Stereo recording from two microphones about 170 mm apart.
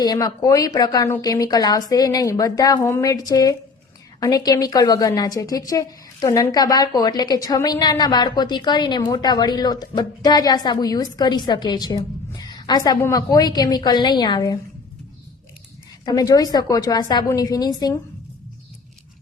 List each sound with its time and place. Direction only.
0.0 s a woman's voice: 25° left (ahead or behind)
16.0 s a woman's voice: 20° left (ahead or behind)